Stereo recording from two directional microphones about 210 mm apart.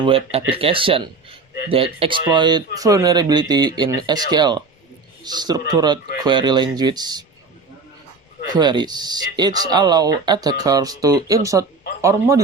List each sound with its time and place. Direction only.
0.0 s speech: 25° right (ahead or behind)
8.4 s speech: 20° right (ahead or behind)